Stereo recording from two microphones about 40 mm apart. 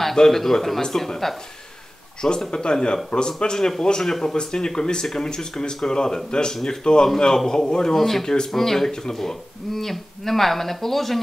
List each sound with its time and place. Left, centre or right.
0.0 s speech: centre
2.2 s speech: centre